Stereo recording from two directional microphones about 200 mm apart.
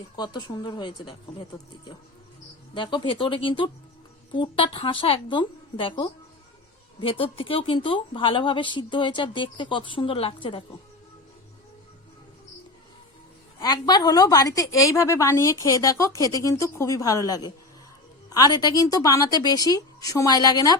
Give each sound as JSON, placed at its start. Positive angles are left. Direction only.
{"t": 0.2, "sound": "a woman's voice", "side_deg": 20}
{"t": 2.7, "sound": "a woman's voice", "side_deg": 25}
{"t": 13.6, "sound": "a woman's voice", "side_deg": 20}